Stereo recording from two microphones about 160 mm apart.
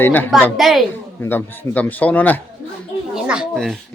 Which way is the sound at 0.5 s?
Centre (ahead or behind).